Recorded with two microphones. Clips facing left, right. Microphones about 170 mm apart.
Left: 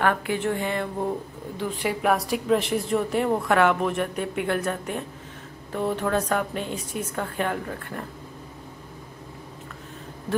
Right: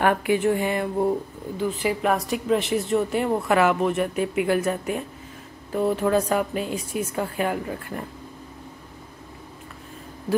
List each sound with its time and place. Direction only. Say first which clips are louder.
0.0 s a woman's voice: right 4 dB; 15° right (ahead or behind)
1.6 s a woman's voice: right 2 dB; centre (ahead or behind)